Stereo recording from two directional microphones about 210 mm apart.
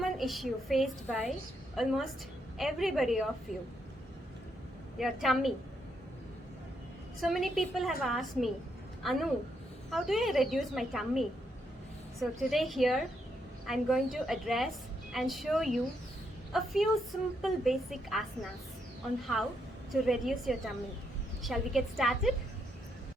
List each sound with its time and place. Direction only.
0.0 s a woman's voice: centre (ahead or behind)
4.9 s a woman's voice: centre (ahead or behind)
7.2 s a woman's voice: centre (ahead or behind)